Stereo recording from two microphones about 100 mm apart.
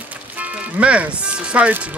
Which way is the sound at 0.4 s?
15° right (ahead or behind).